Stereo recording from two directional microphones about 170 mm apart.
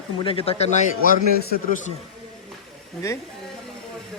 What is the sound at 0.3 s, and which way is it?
Speech, 35° left (ahead or behind).